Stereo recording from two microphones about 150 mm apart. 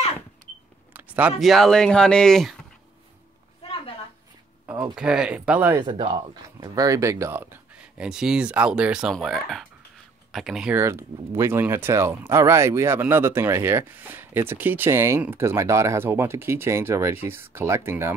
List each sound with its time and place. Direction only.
0.9 s speech: 10° right (ahead or behind)
3.6 s a sound: 40° left (ahead or behind)
4.9 s speech: 5° right (ahead or behind)
5.8 s speech: 30° right (ahead or behind); by 10.8 s 5° right (ahead or behind)
10.8 s speech: 20° right (ahead or behind)